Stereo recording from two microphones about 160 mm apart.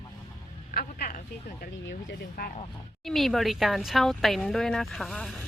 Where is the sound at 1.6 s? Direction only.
80° left.